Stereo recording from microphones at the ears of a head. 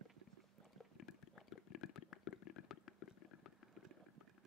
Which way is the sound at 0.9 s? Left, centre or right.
Left.